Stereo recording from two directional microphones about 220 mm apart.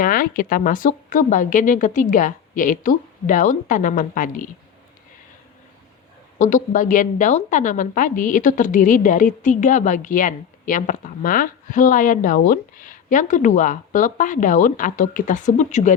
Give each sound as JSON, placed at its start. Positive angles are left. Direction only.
{"t": 0.0, "sound": "a woman's voice", "side_deg": 40}
{"t": 6.4, "sound": "a woman's voice", "side_deg": 35}